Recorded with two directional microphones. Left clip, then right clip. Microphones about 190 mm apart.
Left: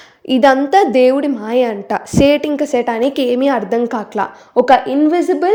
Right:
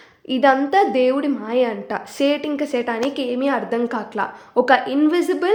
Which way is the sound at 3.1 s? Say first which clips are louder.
Left 7 dB; 45° left (ahead or behind).